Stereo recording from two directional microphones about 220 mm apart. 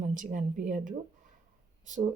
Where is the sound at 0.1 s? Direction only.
35° right (ahead or behind).